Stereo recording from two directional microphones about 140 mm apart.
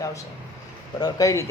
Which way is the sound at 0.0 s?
25° left (ahead or behind).